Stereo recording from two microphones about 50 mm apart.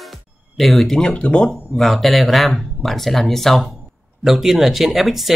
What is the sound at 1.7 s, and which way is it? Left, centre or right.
Speech, centre.